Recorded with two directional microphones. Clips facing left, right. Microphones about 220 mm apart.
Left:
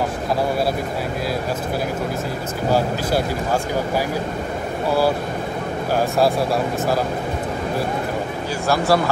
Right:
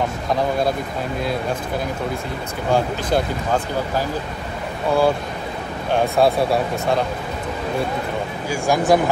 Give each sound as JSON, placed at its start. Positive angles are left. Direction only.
{"t": 2.7, "sound": "speech", "side_deg": 5}
{"t": 5.9, "sound": "speech", "side_deg": 0}
{"t": 8.6, "sound": "speech", "side_deg": -15}